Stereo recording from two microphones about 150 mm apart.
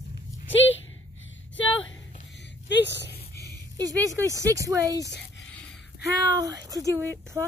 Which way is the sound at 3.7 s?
25° right (ahead or behind).